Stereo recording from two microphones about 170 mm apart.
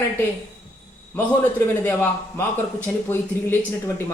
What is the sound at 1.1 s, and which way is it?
Speech, 10° left (ahead or behind).